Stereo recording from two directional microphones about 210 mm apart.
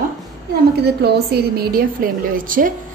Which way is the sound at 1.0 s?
50° right (ahead or behind).